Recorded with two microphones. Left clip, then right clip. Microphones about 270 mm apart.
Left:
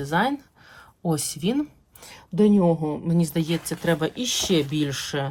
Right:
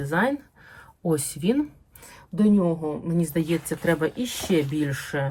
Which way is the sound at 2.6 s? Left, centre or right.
Centre.